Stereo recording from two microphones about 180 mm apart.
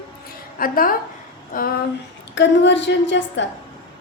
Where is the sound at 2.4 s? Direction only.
85° left.